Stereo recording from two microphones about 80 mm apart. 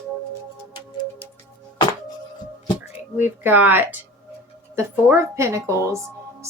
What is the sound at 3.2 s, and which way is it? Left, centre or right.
A woman's voice, right.